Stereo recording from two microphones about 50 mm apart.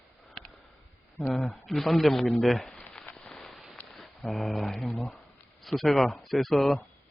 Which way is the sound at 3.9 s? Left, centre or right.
Centre.